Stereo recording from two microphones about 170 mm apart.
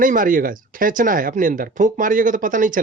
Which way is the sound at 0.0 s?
55° right (ahead or behind).